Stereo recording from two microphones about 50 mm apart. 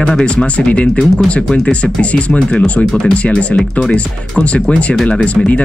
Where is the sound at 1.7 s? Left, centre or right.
Left.